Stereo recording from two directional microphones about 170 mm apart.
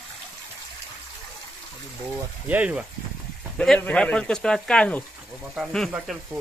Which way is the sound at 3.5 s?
5° left (ahead or behind).